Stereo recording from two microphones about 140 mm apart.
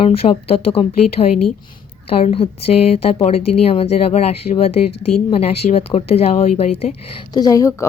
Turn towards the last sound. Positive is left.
turn(degrees=25)  # may be behind; listen again after turning